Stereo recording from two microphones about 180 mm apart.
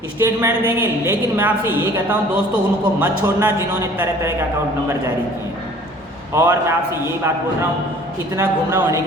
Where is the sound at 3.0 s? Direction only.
10° right (ahead or behind).